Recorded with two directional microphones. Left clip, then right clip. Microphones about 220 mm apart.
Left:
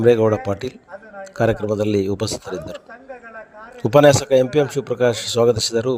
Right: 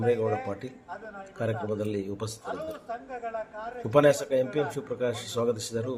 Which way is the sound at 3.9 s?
40° left (ahead or behind).